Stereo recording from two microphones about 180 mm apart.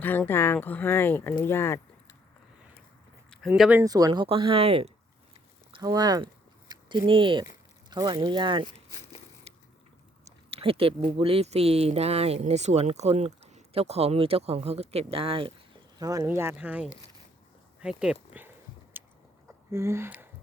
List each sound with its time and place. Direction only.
0.0 s speech: 10° left (ahead or behind)
3.2 s speech: centre (ahead or behind)
3.8 s speech: 20° right (ahead or behind)
5.7 s a sound: 20° right (ahead or behind)
7.9 s speech: 25° right (ahead or behind)
9.5 s a sound: 35° right (ahead or behind)
10.2 s speech: 30° right (ahead or behind)
16.0 s speech: 20° right (ahead or behind)
17.7 s a sound: 5° right (ahead or behind)
19.0 s chewing: 10° right (ahead or behind)
19.7 s speech: 15° right (ahead or behind)